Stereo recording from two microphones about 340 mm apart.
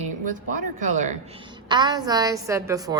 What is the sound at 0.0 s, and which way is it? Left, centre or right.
A woman's voice, right.